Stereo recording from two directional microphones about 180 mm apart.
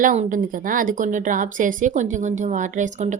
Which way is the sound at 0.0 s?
45° right (ahead or behind).